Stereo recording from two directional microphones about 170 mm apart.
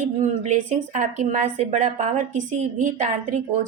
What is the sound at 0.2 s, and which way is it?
Speech, 45° right (ahead or behind).